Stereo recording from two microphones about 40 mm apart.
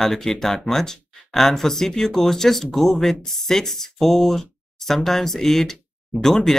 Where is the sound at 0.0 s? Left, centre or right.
Centre.